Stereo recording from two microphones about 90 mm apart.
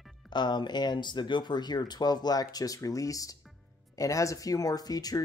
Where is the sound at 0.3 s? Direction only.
55° left (ahead or behind).